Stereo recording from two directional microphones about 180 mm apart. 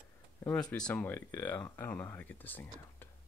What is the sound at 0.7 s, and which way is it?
Speech, 5° left (ahead or behind).